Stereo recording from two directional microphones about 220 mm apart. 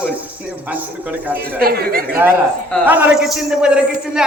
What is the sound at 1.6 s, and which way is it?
Speech, 45° right (ahead or behind).